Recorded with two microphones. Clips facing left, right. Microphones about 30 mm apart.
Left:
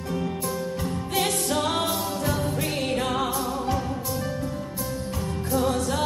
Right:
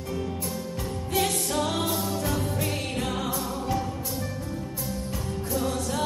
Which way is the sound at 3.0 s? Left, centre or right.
Left.